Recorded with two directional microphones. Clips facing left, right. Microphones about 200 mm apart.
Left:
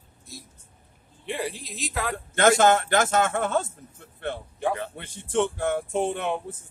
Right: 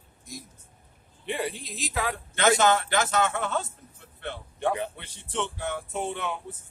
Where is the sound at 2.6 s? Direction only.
50° left (ahead or behind).